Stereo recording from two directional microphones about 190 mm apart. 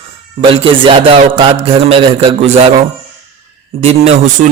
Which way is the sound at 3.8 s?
35° right (ahead or behind).